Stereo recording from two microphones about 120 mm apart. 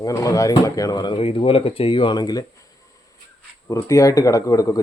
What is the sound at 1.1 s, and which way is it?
Speech, 50° left (ahead or behind).